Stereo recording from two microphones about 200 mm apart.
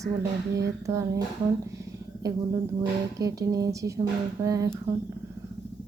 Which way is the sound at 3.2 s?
15° right (ahead or behind).